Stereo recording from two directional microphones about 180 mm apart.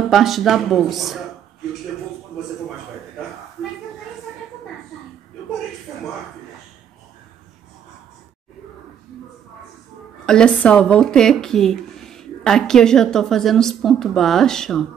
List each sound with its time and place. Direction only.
0.1 s speech: centre (ahead or behind)
10.2 s speech: 5° left (ahead or behind)